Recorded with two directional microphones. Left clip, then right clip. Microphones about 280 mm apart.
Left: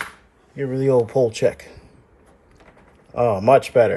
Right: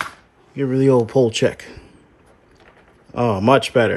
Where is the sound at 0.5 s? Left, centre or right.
Centre.